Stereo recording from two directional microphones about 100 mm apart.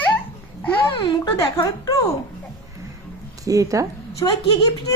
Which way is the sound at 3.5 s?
35° right (ahead or behind).